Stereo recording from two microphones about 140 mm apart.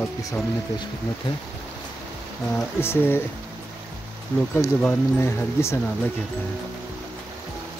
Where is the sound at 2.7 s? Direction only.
15° left (ahead or behind).